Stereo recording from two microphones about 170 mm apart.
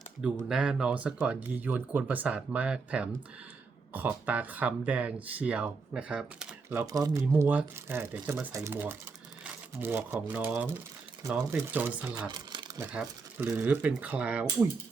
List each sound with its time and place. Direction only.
0.4 s speech: 5° right (ahead or behind)
12.3 s a sound: 25° right (ahead or behind)
12.9 s speech: 5° right (ahead or behind)